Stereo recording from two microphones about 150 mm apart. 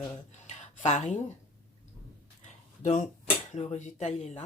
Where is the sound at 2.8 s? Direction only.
50° left (ahead or behind).